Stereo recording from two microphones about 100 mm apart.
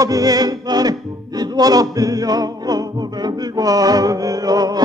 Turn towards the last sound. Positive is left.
turn(degrees=-40)  # may be behind; listen again after turning